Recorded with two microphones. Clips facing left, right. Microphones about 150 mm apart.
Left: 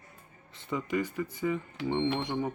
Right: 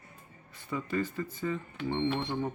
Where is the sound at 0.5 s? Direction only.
20° left (ahead or behind).